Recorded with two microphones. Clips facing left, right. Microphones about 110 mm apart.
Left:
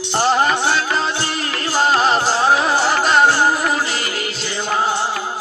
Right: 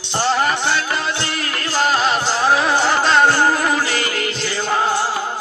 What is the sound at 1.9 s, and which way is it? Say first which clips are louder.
Music: left 2 dB; 35° left (ahead or behind).